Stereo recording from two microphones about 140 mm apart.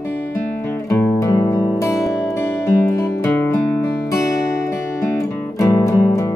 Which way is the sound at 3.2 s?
15° left (ahead or behind).